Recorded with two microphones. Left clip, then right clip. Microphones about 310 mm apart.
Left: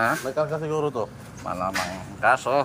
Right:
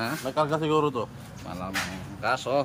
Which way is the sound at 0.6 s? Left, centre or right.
Centre.